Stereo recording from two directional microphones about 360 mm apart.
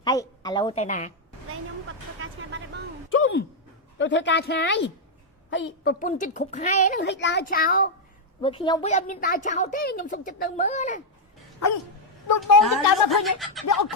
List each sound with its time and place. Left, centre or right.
0.0 s a woman's voice: centre
2.2 s vehicle: right
3.1 s a sound: left
3.9 s a woman's voice: left
12.4 s speech: centre